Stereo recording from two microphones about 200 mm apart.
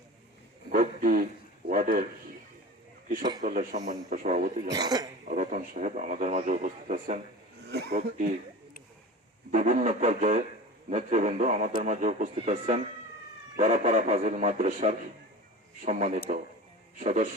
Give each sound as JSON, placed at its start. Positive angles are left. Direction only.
{"t": 0.7, "sound": "a sound", "side_deg": -40}
{"t": 3.4, "sound": "a man's voice", "side_deg": -40}
{"t": 4.7, "sound": "speech", "side_deg": -20}
{"t": 5.3, "sound": "a man's voice", "side_deg": -40}
{"t": 7.7, "sound": "speech", "side_deg": -55}
{"t": 9.5, "sound": "a man's voice", "side_deg": -40}